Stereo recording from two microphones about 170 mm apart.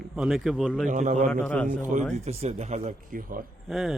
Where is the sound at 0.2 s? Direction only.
Centre (ahead or behind).